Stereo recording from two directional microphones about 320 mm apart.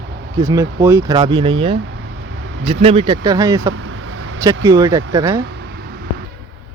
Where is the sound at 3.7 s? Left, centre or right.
Right.